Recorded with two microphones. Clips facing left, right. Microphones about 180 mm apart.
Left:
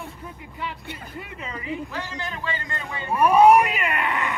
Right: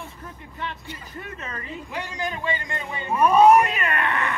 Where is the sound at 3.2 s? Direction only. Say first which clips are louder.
Even; 10° left (ahead or behind).